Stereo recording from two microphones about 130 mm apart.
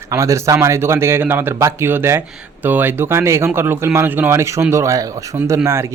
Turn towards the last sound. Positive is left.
turn(degrees=-20)  # may be behind; listen again after turning